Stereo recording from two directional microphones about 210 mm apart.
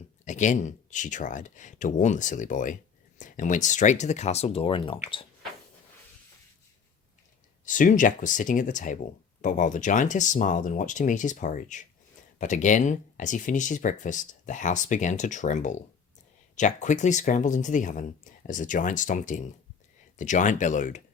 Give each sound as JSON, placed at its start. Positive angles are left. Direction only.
{"t": 0.3, "sound": "speech", "side_deg": 35}
{"t": 7.6, "sound": "speech", "side_deg": 40}